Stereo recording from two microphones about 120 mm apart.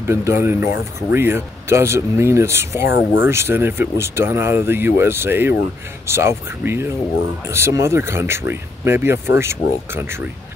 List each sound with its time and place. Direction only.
0.0 s speech: 20° right (ahead or behind)